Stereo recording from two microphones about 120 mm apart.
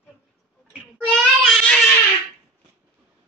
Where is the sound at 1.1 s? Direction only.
5° left (ahead or behind).